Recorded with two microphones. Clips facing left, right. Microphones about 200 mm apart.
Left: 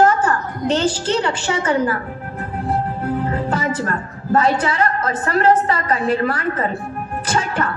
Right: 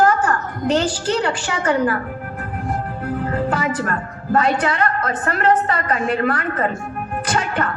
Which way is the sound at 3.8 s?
30° left (ahead or behind).